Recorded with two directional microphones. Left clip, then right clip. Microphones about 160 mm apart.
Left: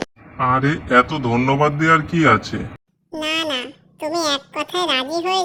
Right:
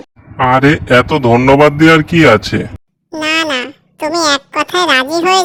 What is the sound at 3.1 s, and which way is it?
A child's voice, 60° right (ahead or behind).